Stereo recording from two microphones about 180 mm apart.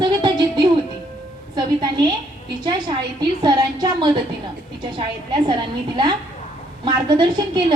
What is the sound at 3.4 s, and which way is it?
A woman's voice, 20° right (ahead or behind).